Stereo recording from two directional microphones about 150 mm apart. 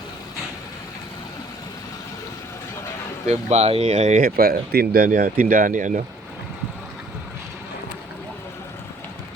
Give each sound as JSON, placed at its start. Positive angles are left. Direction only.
{"t": 3.2, "sound": "speech", "side_deg": -45}
{"t": 4.2, "sound": "speech", "side_deg": -75}